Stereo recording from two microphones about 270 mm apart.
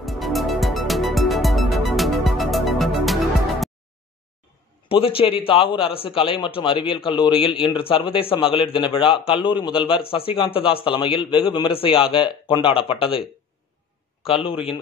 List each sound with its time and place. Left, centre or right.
0.0 s music: centre
4.8 s a man's voice: centre
14.2 s a man's voice: centre